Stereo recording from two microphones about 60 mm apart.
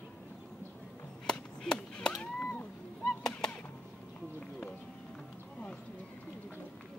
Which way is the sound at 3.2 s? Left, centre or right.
Centre.